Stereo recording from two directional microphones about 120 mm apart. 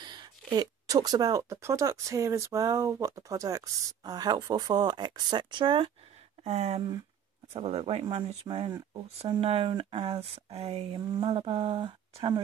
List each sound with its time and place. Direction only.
0.0 s speech: 40° right (ahead or behind)
6.4 s speech: 65° right (ahead or behind)
7.5 s speech: 55° right (ahead or behind)